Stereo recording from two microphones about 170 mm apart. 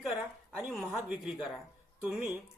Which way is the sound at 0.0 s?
Centre (ahead or behind).